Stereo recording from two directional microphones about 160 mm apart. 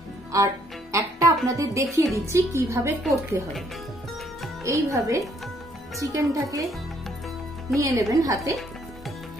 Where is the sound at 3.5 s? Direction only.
Centre (ahead or behind).